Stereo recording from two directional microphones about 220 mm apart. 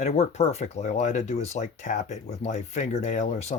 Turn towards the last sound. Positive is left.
turn(degrees=30)  # may be behind; listen again after turning